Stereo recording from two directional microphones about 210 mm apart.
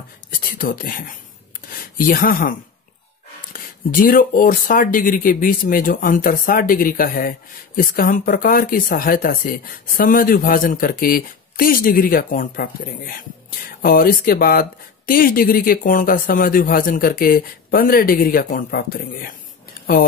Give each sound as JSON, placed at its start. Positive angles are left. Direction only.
{"t": 0.4, "sound": "speech", "side_deg": 40}
{"t": 3.5, "sound": "speech", "side_deg": 40}